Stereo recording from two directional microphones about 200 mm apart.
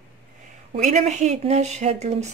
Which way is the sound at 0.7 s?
35° right (ahead or behind).